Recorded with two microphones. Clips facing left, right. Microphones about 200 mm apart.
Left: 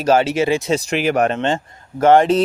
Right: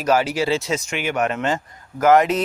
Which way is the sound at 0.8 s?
35° left (ahead or behind).